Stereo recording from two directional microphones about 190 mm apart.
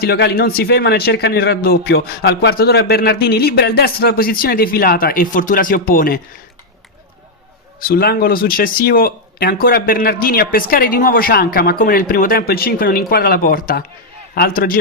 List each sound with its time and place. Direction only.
0.0 s a man's voice: 55° left (ahead or behind)
7.8 s speech: 50° left (ahead or behind)